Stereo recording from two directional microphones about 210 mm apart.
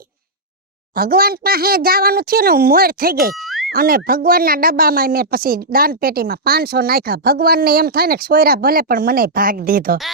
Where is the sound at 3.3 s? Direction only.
Centre (ahead or behind).